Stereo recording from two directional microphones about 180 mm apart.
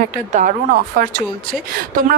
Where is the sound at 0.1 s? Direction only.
45° right (ahead or behind).